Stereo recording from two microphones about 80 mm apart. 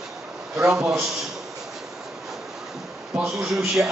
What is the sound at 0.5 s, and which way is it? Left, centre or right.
Speech, centre.